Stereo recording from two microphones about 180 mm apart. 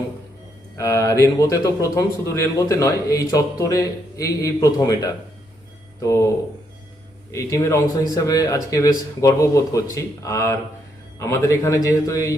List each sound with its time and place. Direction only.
0.8 s speech: 15° left (ahead or behind)